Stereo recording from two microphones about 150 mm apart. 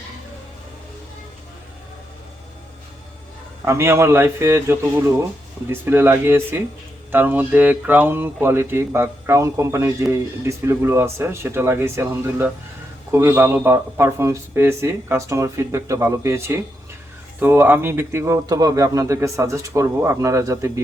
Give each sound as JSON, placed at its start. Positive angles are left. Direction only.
{"t": 3.7, "sound": "a man's voice", "side_deg": -20}